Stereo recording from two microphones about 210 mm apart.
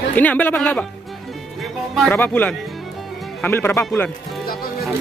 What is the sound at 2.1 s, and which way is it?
Speech, 10° left (ahead or behind).